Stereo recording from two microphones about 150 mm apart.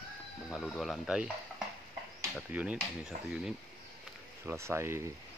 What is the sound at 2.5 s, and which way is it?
Speech, 10° right (ahead or behind).